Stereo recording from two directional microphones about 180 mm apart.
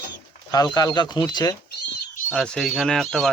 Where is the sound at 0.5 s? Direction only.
20° left (ahead or behind).